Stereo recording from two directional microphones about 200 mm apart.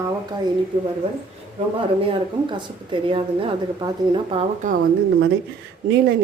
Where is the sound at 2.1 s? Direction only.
25° right (ahead or behind).